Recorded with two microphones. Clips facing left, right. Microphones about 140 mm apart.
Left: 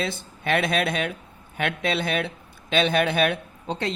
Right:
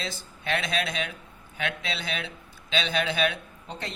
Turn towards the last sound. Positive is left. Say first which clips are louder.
# left 9 dB
turn(degrees=70)  # may be behind; listen again after turning